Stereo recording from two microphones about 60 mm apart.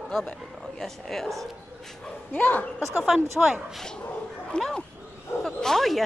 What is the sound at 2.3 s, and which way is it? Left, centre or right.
Speech, left.